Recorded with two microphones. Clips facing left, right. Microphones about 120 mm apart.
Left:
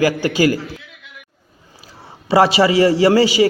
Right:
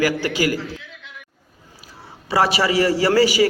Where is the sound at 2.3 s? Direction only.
25° left (ahead or behind).